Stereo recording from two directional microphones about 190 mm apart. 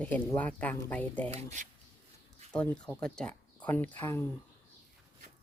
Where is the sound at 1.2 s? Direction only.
40° right (ahead or behind).